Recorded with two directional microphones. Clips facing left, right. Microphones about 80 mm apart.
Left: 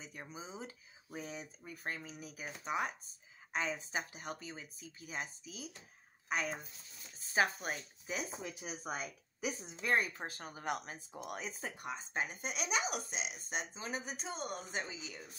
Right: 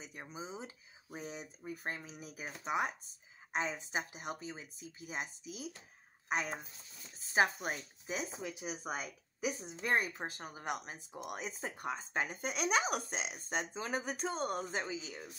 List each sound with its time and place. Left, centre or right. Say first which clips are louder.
0.0 s speech: right 2 dB; centre
8.5 s speech: right 2 dB; centre
11.7 s speech: right 3 dB; right